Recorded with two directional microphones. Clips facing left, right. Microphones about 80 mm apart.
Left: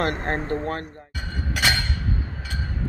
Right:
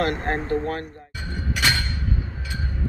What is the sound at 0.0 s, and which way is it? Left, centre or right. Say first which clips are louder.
Speech: right 1 dB; left.